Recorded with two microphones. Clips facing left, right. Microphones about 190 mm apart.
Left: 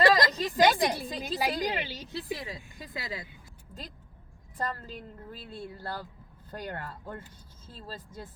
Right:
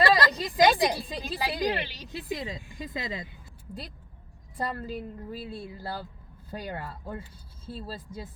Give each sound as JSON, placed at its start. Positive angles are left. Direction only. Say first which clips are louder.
{"t": 0.3, "sound": "a woman's voice", "louder": "right 2 dB", "side_deg": -15}
{"t": 1.7, "sound": "a woman's voice", "louder": "right 1 dB", "side_deg": 20}
{"t": 2.1, "sound": "speech", "louder": "right 3 dB", "side_deg": -20}
{"t": 4.5, "sound": "a woman's voice", "louder": "right 3 dB", "side_deg": -10}